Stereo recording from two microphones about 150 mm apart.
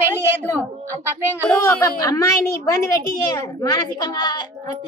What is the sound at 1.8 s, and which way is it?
A woman's voice, 20° left (ahead or behind).